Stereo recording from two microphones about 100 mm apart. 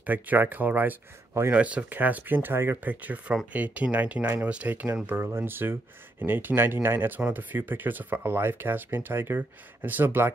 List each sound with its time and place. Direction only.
0.0 s speech: 15° right (ahead or behind)